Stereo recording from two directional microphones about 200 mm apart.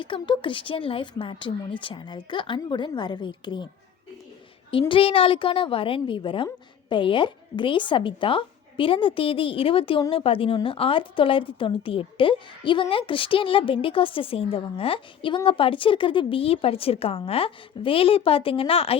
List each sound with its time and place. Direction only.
0.0 s a woman's voice: 25° left (ahead or behind)
4.7 s a woman's voice: 25° left (ahead or behind)